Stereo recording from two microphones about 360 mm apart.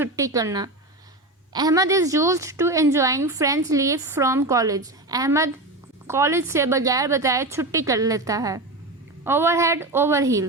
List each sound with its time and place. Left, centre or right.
0.0 s a woman's voice: centre